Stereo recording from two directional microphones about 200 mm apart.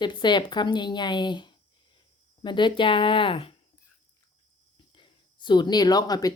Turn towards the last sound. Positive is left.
turn(degrees=20)  # may be behind; listen again after turning